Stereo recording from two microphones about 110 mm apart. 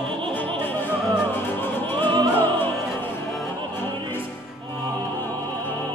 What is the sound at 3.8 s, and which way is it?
Music, 20° left (ahead or behind).